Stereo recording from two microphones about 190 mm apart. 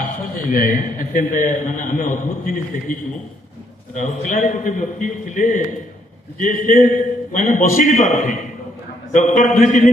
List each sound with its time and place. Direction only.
0.5 s a man's voice: 50° left (ahead or behind)